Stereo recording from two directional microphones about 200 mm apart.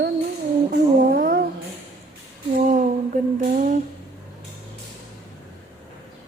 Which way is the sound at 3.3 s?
40° right (ahead or behind).